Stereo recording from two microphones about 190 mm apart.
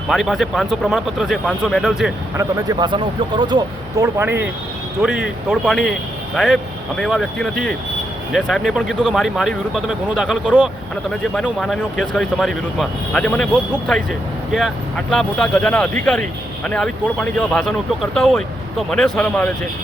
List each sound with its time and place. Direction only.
0.1 s speech: centre (ahead or behind)
2.4 s speech: 20° right (ahead or behind)
4.0 s speech: 10° right (ahead or behind); by 19.5 s 5° left (ahead or behind)